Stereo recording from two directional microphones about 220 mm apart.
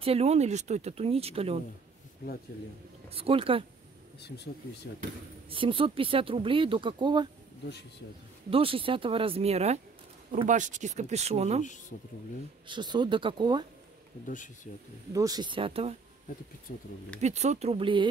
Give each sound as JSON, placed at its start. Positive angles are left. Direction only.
{"t": 0.0, "sound": "speech", "side_deg": -25}
{"t": 3.1, "sound": "speech", "side_deg": -25}
{"t": 5.5, "sound": "speech", "side_deg": -25}
{"t": 8.5, "sound": "speech", "side_deg": -25}
{"t": 12.6, "sound": "speech", "side_deg": -20}
{"t": 14.2, "sound": "speech", "side_deg": 35}
{"t": 15.1, "sound": "speech", "side_deg": -15}
{"t": 16.7, "sound": "speech", "side_deg": 40}
{"t": 17.2, "sound": "speech", "side_deg": -30}